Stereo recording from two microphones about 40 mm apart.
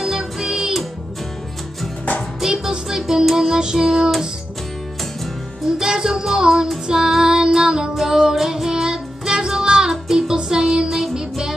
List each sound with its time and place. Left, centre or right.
0.0 s music: centre
2.4 s music: centre
5.7 s music: centre
6.9 s child singing: centre
7.9 s music: centre